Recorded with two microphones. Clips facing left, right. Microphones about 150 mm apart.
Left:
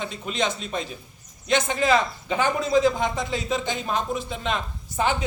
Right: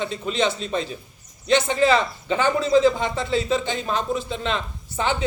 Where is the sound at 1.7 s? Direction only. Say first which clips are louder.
Right 2 dB; 10° left (ahead or behind).